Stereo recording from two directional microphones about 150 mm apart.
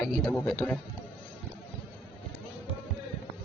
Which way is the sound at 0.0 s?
5° left (ahead or behind).